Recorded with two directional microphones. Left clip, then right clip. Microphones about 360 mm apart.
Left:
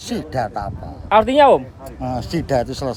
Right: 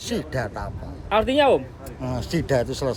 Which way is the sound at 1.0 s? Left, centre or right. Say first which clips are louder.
Left 7 dB; left.